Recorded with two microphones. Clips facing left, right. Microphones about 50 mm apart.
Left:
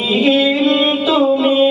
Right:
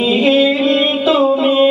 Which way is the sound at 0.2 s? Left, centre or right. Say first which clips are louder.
Even; centre.